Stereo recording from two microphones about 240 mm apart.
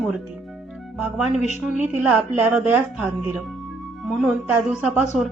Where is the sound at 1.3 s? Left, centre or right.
Left.